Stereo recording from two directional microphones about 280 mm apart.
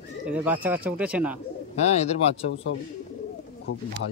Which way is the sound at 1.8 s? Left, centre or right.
Left.